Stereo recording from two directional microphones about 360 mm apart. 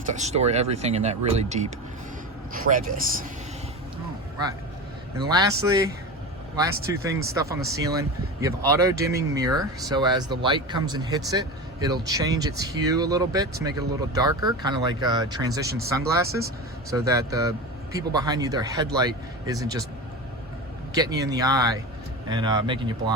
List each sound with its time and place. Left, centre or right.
0.1 s speech: centre
5.2 s speech: centre
20.9 s speech: centre